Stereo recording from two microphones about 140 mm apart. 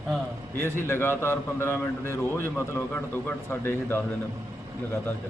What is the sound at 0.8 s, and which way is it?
Speech, 15° left (ahead or behind).